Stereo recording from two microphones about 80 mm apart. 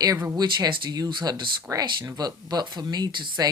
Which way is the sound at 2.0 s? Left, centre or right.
Right.